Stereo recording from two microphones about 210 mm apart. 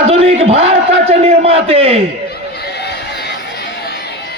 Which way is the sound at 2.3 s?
50° left (ahead or behind).